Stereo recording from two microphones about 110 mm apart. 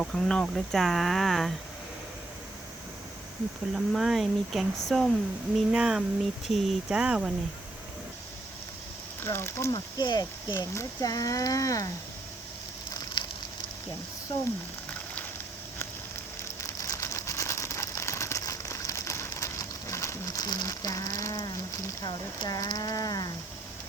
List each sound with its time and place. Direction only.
0.0 s speech: 5° left (ahead or behind)
3.8 s speech: 5° right (ahead or behind)
9.2 s speech: 20° left (ahead or behind)
13.2 s fire: 45° left (ahead or behind)
16.4 s a sound: 25° left (ahead or behind)
22.0 s speech: 40° left (ahead or behind)